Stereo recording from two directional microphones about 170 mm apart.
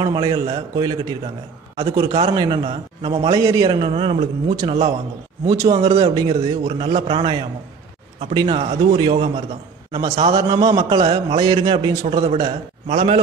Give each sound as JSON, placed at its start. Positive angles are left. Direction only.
{"t": 0.0, "sound": "a man's voice", "side_deg": -25}
{"t": 1.8, "sound": "a man's voice", "side_deg": -35}
{"t": 3.3, "sound": "a man's voice", "side_deg": -20}
{"t": 10.3, "sound": "a man's voice", "side_deg": -25}